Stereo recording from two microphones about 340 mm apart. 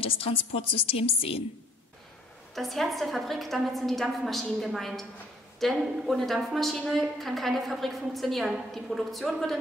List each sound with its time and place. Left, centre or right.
0.0 s a sound: centre
0.6 s a woman's voice: centre
2.5 s a woman's voice: centre